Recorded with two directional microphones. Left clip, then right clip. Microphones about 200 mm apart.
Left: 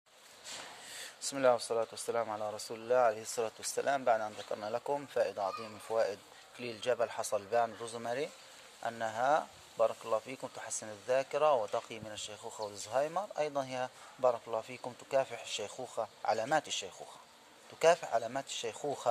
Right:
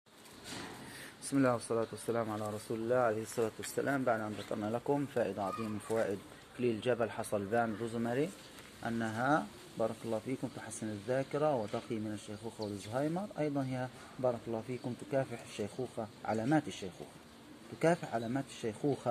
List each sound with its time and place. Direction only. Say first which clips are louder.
1.3 s speech: left 3 dB; 50° left (ahead or behind)
12.4 s speech: even; 90° left
12.9 s speech: left 4 dB; 55° left (ahead or behind)